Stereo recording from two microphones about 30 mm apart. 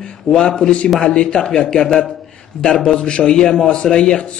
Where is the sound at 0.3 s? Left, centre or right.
Left.